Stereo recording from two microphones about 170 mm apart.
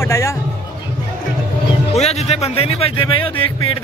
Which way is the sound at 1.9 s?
40° left (ahead or behind).